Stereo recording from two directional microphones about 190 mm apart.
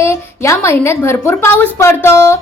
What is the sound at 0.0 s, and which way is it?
A woman's voice, 15° left (ahead or behind).